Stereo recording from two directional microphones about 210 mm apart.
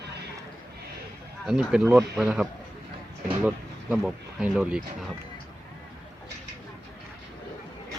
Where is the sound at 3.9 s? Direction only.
Centre (ahead or behind).